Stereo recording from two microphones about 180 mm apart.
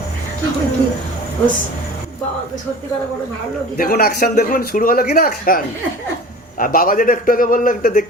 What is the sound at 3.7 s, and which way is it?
A man's voice, 55° left (ahead or behind).